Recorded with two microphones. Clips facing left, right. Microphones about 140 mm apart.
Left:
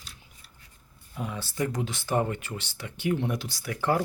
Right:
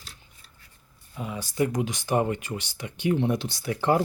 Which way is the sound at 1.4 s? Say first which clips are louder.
Right 5 dB; 15° right (ahead or behind).